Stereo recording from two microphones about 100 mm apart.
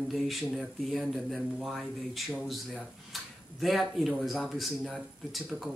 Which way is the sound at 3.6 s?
Centre (ahead or behind).